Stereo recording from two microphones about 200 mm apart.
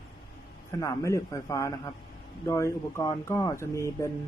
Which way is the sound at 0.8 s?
15° left (ahead or behind).